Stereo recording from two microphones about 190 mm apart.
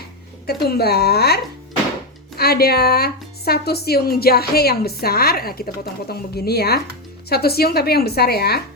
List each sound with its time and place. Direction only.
0.4 s a woman's voice: 55° left (ahead or behind)